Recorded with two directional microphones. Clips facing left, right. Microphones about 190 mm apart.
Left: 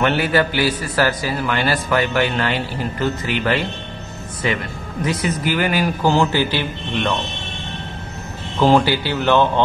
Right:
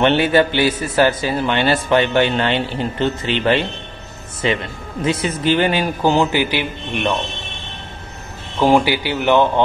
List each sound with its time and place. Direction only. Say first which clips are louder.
0.0 s a man's voice: right 3 dB; 25° right (ahead or behind)
8.5 s speech: even; 15° right (ahead or behind)